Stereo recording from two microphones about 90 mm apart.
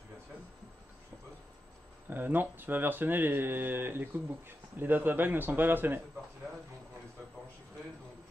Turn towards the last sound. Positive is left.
turn(degrees=-35)  # may be behind; listen again after turning